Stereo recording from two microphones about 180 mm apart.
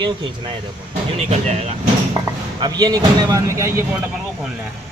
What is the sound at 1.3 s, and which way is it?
Speech, 40° right (ahead or behind).